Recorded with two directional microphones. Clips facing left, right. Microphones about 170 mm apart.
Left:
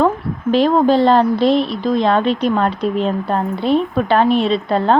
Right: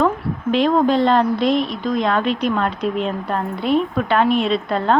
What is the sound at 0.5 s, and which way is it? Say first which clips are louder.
Speech: left 3 dB; 35° left (ahead or behind).